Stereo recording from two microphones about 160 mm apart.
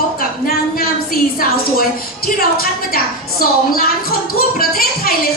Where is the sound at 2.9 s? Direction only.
65° left (ahead or behind).